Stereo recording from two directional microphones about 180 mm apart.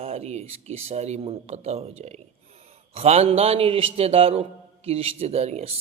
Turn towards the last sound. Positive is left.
turn(degrees=-35)  # may be behind; listen again after turning